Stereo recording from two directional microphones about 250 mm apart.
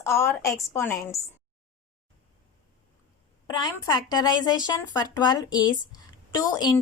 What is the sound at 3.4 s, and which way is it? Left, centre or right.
A woman's voice, centre.